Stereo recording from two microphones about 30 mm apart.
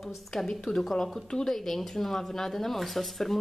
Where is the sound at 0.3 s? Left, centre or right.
Centre.